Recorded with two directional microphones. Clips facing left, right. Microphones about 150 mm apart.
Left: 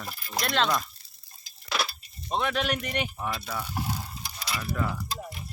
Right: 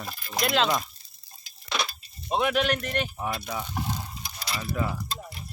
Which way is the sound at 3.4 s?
15° right (ahead or behind).